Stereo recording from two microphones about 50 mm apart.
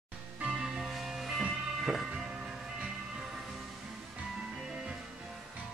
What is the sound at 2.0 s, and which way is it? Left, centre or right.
Music, centre.